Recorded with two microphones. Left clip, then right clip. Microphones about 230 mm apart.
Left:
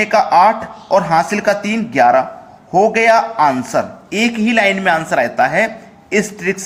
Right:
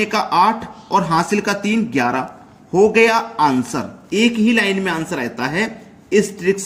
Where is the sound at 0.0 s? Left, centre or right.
Centre.